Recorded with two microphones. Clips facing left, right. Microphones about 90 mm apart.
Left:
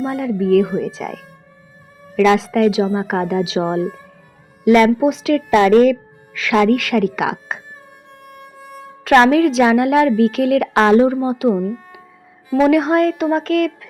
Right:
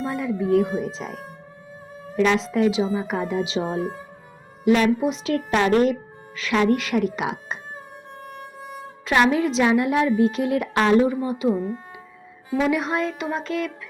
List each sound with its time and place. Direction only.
0.0 s a woman's voice: 65° left (ahead or behind); by 7.6 s 90° left
8.2 s music: 30° right (ahead or behind)
9.0 s a woman's voice: 80° left; by 13.7 s 60° left (ahead or behind)